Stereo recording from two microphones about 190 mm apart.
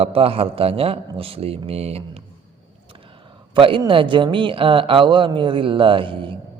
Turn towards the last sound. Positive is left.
turn(degrees=-25)  # may be behind; listen again after turning